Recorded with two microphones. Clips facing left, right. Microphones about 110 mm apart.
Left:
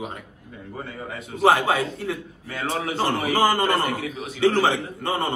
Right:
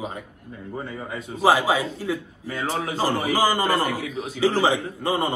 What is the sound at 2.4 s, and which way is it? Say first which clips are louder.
Speech: even; 30° right (ahead or behind).